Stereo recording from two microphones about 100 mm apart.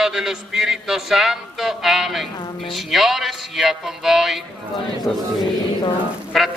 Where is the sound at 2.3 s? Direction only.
50° left (ahead or behind).